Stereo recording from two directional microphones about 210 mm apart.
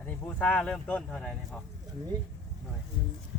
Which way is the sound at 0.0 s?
10° left (ahead or behind).